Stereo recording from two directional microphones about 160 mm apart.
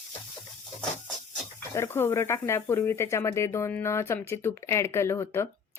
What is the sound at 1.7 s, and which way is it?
Speech, 15° left (ahead or behind).